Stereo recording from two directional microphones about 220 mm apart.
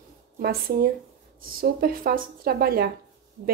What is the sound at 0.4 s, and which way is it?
A woman's voice, 45° right (ahead or behind).